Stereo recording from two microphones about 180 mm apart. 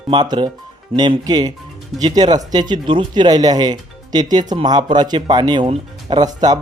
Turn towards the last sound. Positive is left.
turn(degrees=-20)  # may be behind; listen again after turning